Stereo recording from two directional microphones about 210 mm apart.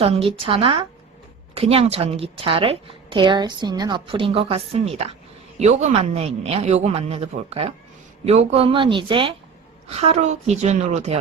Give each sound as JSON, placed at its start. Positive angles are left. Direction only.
{"t": 0.0, "sound": "a woman's voice", "side_deg": -30}